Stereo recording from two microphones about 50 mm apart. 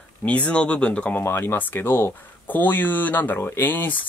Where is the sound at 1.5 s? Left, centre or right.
Left.